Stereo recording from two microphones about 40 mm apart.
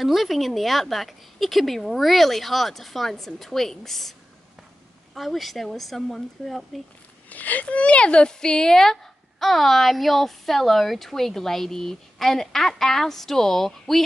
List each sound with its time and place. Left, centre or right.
0.0 s a woman's voice: centre
5.1 s a woman's voice: centre
7.2 s speech: left
7.6 s speech: left
8.7 s a woman's voice: centre